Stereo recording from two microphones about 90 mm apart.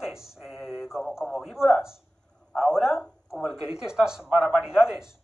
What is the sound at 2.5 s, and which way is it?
A man's voice, 5° right (ahead or behind).